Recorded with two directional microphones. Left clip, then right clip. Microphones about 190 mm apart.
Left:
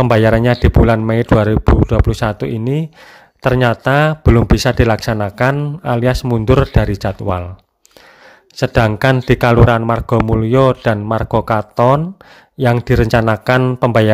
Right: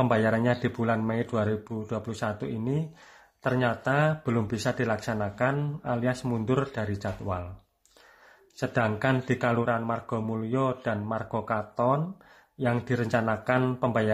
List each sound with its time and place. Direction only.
0.0 s speech: 45° left (ahead or behind)
8.5 s speech: 50° left (ahead or behind)